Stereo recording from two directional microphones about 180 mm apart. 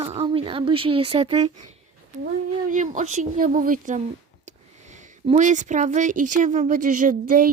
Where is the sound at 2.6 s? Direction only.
45° right (ahead or behind).